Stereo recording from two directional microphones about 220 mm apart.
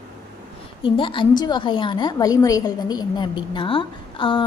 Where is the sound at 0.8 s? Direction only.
20° left (ahead or behind).